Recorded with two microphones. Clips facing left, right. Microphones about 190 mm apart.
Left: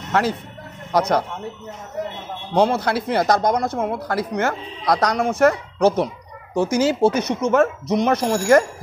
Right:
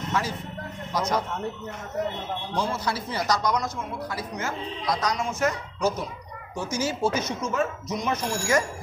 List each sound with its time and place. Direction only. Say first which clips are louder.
0.1 s speech: left 9 dB; 65° left (ahead or behind)
2.5 s speech: left 11 dB; 65° left (ahead or behind)